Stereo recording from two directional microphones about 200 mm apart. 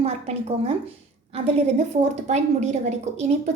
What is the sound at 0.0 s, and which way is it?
A woman's voice, 30° right (ahead or behind).